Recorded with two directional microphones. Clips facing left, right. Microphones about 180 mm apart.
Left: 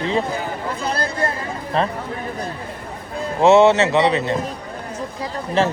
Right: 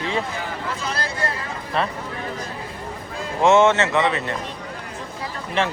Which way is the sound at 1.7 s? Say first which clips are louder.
Left 3 dB; 35° left (ahead or behind).